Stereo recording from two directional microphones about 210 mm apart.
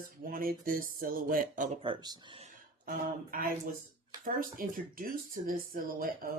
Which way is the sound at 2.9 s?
45° right (ahead or behind).